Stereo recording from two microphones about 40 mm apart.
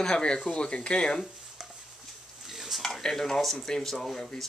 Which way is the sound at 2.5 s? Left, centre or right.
Centre.